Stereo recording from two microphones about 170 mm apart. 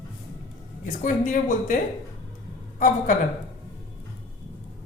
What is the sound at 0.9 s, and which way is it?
Speech, 50° left (ahead or behind).